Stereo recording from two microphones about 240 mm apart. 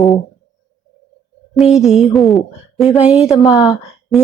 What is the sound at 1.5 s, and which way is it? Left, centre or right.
A woman's voice, centre.